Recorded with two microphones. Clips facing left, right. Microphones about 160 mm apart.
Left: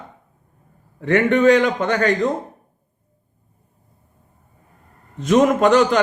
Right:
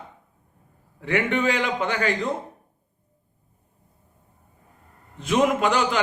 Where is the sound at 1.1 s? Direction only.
45° left (ahead or behind).